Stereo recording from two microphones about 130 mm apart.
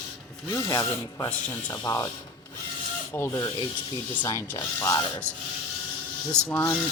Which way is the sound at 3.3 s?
30° left (ahead or behind).